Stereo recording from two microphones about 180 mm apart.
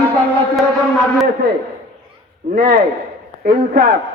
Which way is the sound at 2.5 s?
55° right (ahead or behind).